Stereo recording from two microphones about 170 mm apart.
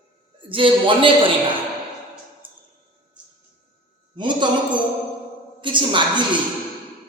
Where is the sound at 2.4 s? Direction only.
30° right (ahead or behind).